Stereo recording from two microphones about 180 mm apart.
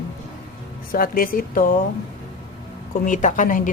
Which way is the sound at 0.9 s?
50° left (ahead or behind).